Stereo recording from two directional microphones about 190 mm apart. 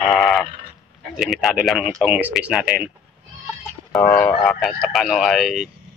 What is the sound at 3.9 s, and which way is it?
Speech, 10° left (ahead or behind).